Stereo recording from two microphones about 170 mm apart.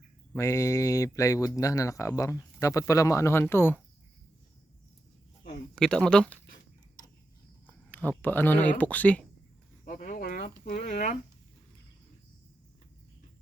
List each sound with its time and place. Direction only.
0.3 s speech: 20° left (ahead or behind)
5.7 s speech: 5° left (ahead or behind)
7.7 s speech: 10° left (ahead or behind)
9.8 s cricket: 50° left (ahead or behind)
10.7 s speech: 50° left (ahead or behind)